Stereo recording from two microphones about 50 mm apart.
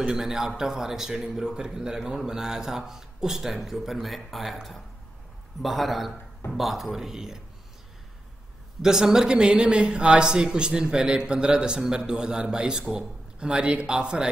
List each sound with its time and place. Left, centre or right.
0.0 s a man's voice: centre
8.8 s speech: centre